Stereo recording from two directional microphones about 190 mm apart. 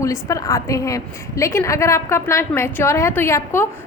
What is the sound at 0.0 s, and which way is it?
A woman's voice, 15° left (ahead or behind).